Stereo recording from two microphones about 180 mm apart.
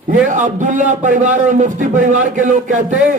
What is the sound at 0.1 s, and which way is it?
A man's voice, 45° right (ahead or behind).